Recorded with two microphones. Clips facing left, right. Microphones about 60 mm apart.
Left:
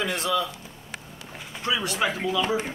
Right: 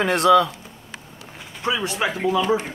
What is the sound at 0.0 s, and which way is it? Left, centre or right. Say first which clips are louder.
Speech: right 10 dB; right.